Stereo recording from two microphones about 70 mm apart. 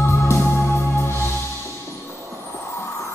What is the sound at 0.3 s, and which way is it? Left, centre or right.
Music, left.